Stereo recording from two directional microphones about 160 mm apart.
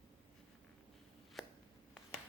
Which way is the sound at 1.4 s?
Centre (ahead or behind).